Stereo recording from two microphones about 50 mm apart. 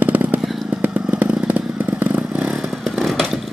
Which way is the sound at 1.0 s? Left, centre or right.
Right.